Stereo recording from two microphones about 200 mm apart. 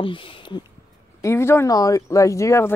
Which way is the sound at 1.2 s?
10° left (ahead or behind).